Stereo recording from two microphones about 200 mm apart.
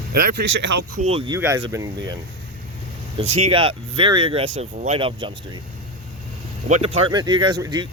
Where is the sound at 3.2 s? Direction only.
30° right (ahead or behind).